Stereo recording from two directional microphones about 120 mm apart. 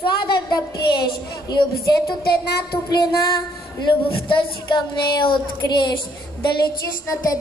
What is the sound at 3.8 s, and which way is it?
Speech, 45° left (ahead or behind).